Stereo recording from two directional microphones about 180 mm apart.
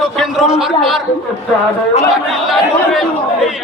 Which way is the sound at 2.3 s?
Centre (ahead or behind).